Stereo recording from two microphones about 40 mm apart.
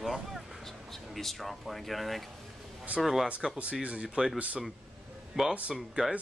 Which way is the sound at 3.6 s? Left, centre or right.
Right.